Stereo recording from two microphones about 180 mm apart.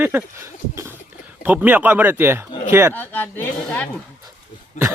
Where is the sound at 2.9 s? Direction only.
10° left (ahead or behind).